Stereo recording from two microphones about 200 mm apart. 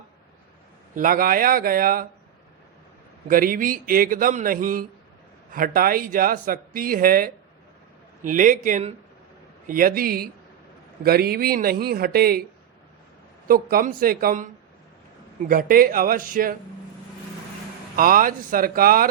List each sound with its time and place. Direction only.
0.9 s speech: 45° right (ahead or behind)
3.2 s a man's voice: 45° right (ahead or behind)
13.5 s speech: 45° right (ahead or behind)
17.9 s speech: 45° right (ahead or behind)